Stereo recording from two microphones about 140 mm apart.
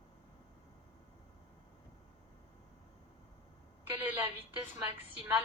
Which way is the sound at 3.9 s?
15° right (ahead or behind).